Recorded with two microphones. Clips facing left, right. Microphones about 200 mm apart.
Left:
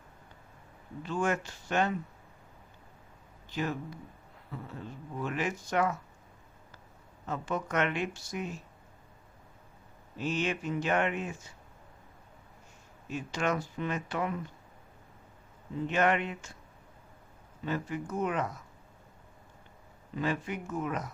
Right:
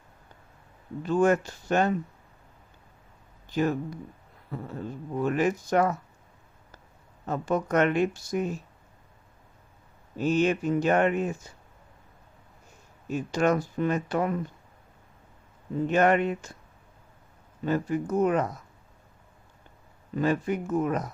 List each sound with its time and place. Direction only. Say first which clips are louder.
1.0 s speech: right 9 dB; 40° right (ahead or behind)
3.5 s speech: right 8 dB; 45° right (ahead or behind)
7.3 s speech: right 7 dB; 40° right (ahead or behind)
10.2 s speech: right 8 dB; 40° right (ahead or behind)
13.1 s speech: right 7 dB; 40° right (ahead or behind)
15.9 s speech: right 6 dB; 40° right (ahead or behind)
17.7 s speech: right 8 dB; 45° right (ahead or behind)
20.1 s speech: right 7 dB; 45° right (ahead or behind)